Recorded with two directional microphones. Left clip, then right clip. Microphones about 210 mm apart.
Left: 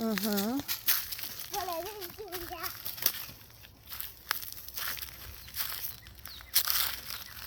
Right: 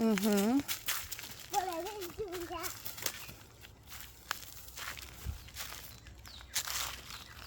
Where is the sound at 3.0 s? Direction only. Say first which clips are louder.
Left 5 dB; 50° left (ahead or behind).